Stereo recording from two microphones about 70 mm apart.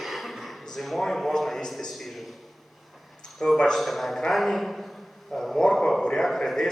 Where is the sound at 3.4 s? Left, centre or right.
Centre.